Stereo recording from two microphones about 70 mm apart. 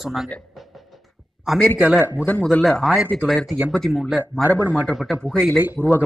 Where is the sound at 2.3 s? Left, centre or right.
Centre.